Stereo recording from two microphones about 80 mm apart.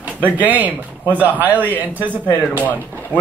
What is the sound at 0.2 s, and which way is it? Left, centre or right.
Speech, right.